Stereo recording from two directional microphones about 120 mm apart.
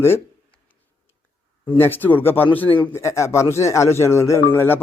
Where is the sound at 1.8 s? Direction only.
15° left (ahead or behind).